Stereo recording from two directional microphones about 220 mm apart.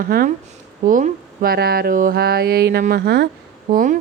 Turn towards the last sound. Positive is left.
turn(degrees=-35)  # may be behind; listen again after turning